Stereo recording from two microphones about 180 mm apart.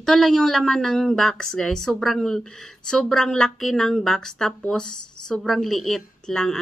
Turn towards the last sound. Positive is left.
turn(degrees=5)  # may be behind; listen again after turning